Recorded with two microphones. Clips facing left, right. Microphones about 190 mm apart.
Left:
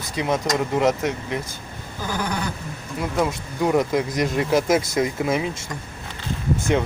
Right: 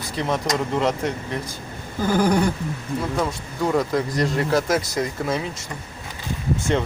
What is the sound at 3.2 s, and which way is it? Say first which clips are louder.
Speech: left 2 dB; 15° left (ahead or behind).